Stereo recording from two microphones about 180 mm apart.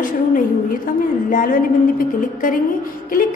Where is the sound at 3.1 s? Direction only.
50° left (ahead or behind).